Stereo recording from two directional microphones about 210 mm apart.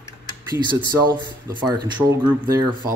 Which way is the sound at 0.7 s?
20° right (ahead or behind).